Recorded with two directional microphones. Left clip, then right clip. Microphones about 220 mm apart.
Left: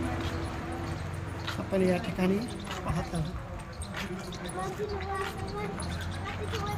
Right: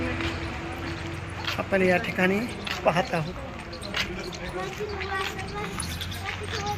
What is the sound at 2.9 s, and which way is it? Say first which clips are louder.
Speech: right 15 dB; 25° right (ahead or behind).